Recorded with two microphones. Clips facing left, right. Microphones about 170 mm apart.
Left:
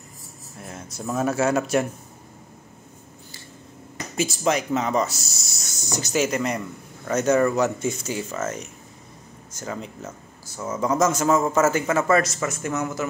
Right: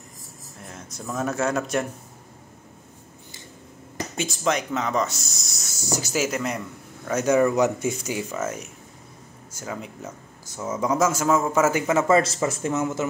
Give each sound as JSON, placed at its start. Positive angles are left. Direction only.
{"t": 0.7, "sound": "a sound", "side_deg": 5}
{"t": 1.1, "sound": "speech", "side_deg": 5}
{"t": 4.6, "sound": "speech", "side_deg": 30}
{"t": 5.2, "sound": "speech", "side_deg": 0}